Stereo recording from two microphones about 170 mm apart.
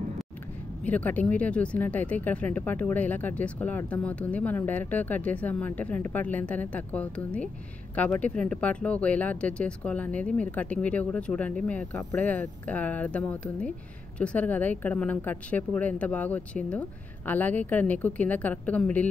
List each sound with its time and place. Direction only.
0.8 s speech: 10° left (ahead or behind)